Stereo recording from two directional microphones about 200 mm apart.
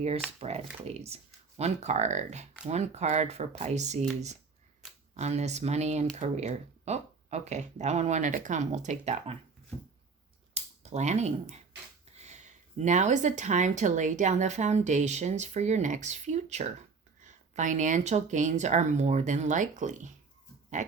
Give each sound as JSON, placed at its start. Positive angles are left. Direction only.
{"t": 0.3, "sound": "speech", "side_deg": -30}
{"t": 5.1, "sound": "speech", "side_deg": -35}
{"t": 10.5, "sound": "speech", "side_deg": -35}